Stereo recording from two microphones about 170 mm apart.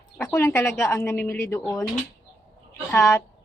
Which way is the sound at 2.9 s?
15° left (ahead or behind).